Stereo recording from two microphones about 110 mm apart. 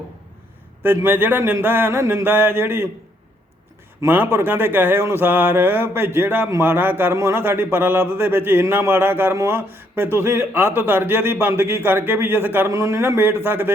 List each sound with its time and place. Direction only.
0.8 s speech: 20° right (ahead or behind)
4.0 s speech: 20° right (ahead or behind)